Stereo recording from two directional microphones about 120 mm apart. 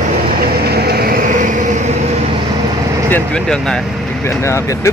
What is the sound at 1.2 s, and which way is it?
Vehicle, 90° right.